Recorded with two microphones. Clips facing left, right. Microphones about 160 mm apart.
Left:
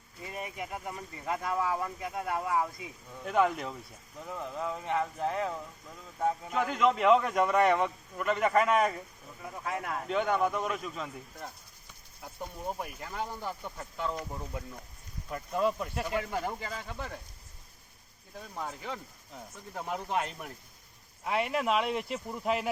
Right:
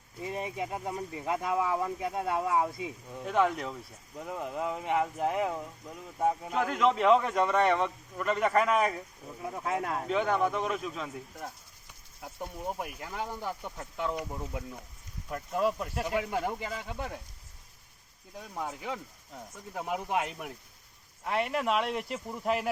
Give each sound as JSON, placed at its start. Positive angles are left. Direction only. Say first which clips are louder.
{"t": 0.2, "sound": "speech", "louder": "right 5 dB", "side_deg": -25}
{"t": 3.2, "sound": "speech", "louder": "even", "side_deg": 0}
{"t": 4.3, "sound": "speech", "louder": "right 2 dB", "side_deg": -15}
{"t": 6.5, "sound": "speech", "louder": "left 2 dB", "side_deg": 0}
{"t": 9.4, "sound": "speech", "louder": "right 4 dB", "side_deg": -25}
{"t": 10.1, "sound": "speech", "louder": "even", "side_deg": 0}
{"t": 18.3, "sound": "speech", "louder": "right 2 dB", "side_deg": -10}
{"t": 21.2, "sound": "speech", "louder": "even", "side_deg": 5}